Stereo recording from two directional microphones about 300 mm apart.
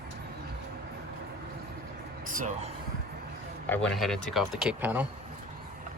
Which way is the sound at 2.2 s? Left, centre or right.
Right.